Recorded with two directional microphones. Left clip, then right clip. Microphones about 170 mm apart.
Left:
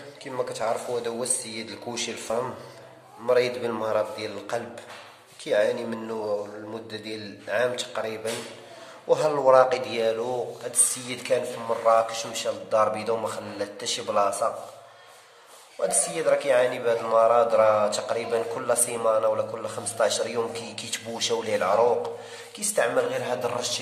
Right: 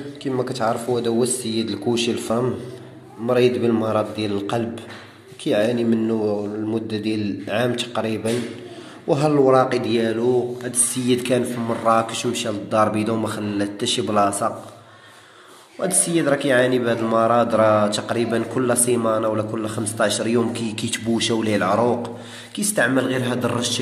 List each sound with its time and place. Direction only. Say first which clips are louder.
0.2 s speech: right 6 dB; centre (ahead or behind)
9.1 s speech: right 2 dB; 5° left (ahead or behind)
15.8 s speech: right 4 dB; 5° right (ahead or behind)